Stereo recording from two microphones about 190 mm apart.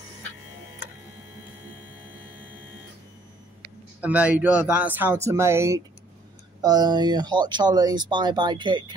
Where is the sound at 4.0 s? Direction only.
5° right (ahead or behind).